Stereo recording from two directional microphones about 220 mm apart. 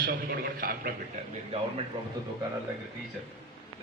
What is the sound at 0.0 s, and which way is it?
Speech, 40° right (ahead or behind).